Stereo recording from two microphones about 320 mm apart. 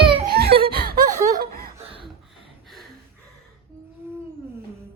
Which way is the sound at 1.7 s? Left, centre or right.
Centre.